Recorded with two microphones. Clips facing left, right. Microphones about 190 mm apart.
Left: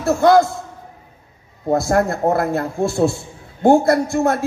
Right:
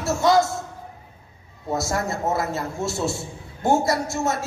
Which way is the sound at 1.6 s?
55° left (ahead or behind).